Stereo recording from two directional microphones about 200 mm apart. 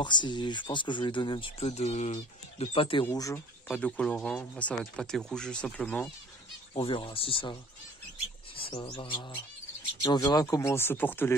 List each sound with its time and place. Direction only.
0.0 s speech: 25° left (ahead or behind)
3.1 s speech: 15° left (ahead or behind)
6.7 s speech: 25° left (ahead or behind)
8.5 s speech: 30° left (ahead or behind); by 11.3 s 10° left (ahead or behind)